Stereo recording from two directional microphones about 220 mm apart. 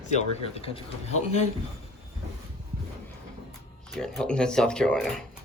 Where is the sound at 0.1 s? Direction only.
30° left (ahead or behind).